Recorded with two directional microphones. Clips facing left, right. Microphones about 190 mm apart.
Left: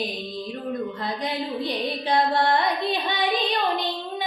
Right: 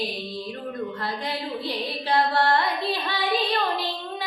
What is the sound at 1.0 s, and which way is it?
Music, 20° left (ahead or behind).